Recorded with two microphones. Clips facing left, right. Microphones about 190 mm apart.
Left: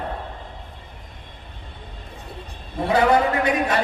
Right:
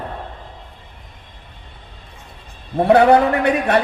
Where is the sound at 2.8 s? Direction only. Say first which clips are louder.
Right 6 dB; 65° right (ahead or behind).